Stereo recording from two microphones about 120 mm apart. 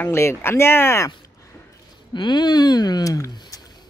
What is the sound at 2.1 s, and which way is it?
Speech, 40° left (ahead or behind).